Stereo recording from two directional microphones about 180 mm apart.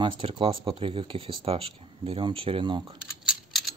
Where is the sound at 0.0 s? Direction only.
30° right (ahead or behind).